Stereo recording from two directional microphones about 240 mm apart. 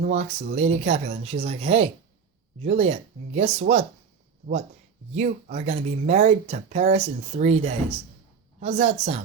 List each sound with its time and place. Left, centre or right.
0.0 s speech: right
5.1 s speech: right